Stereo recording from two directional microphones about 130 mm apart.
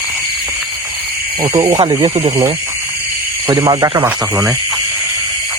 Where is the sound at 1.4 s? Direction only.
40° right (ahead or behind).